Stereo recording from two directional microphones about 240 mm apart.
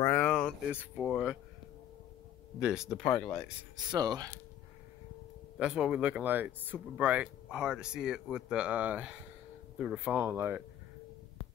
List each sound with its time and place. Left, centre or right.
0.0 s a sound: centre
0.7 s speech: centre
2.6 s speech: centre
3.7 s speech: centre
5.6 s speech: centre